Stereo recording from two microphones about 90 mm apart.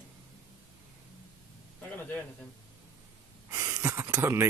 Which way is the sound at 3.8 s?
30° right (ahead or behind).